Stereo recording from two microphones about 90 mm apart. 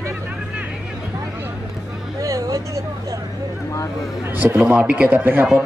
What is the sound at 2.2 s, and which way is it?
Speech, 40° right (ahead or behind).